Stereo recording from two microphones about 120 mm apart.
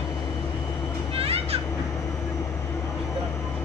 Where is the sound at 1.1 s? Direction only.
55° right (ahead or behind).